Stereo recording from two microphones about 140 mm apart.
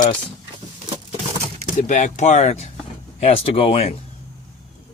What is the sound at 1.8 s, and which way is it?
Speech, 65° left (ahead or behind).